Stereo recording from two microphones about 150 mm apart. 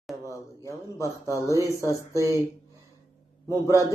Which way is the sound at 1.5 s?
20° right (ahead or behind).